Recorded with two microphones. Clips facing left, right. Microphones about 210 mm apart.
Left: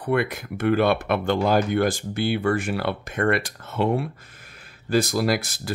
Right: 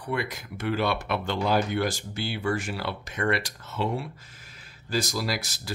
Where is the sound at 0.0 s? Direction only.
60° left (ahead or behind).